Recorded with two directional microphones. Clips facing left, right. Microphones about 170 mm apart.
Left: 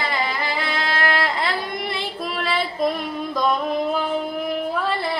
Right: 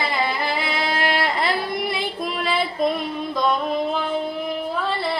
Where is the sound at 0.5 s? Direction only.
15° right (ahead or behind).